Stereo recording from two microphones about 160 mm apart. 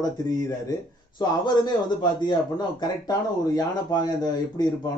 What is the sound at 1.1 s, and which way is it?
A man's voice, 25° left (ahead or behind).